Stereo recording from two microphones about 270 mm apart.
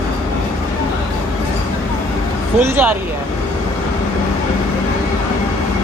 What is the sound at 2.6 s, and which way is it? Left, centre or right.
Speech, centre.